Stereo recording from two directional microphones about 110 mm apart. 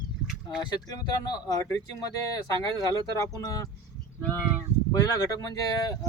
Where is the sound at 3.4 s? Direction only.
35° left (ahead or behind).